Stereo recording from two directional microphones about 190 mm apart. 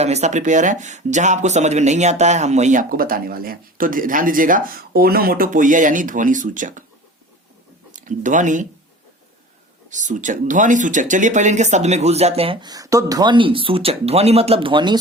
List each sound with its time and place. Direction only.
0.0 s speech: 35° right (ahead or behind)
7.9 s speech: 40° right (ahead or behind)
9.9 s speech: 40° right (ahead or behind); by 14.9 s 25° right (ahead or behind)